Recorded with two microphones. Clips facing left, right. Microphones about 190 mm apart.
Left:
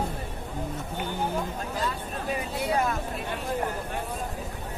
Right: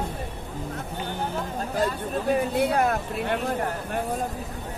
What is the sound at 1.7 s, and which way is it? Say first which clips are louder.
Speech: right 8 dB; 50° right (ahead or behind).